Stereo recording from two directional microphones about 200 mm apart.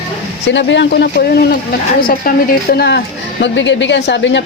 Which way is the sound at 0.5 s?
65° left (ahead or behind).